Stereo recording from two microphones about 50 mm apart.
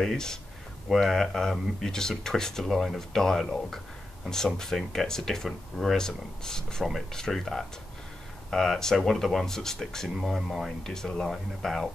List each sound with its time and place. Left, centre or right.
0.0 s speech: centre
11.2 s speech: centre